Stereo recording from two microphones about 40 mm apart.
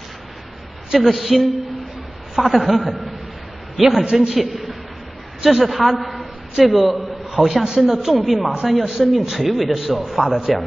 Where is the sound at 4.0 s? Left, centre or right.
Right.